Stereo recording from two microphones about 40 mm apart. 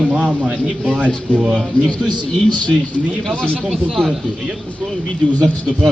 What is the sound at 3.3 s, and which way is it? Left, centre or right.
Speech, left.